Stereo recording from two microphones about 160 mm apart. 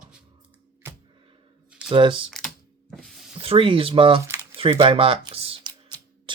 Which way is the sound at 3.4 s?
35° right (ahead or behind).